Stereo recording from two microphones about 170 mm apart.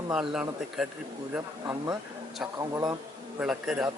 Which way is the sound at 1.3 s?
15° right (ahead or behind).